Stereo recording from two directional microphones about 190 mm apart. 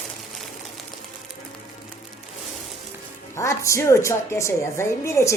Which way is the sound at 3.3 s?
15° left (ahead or behind).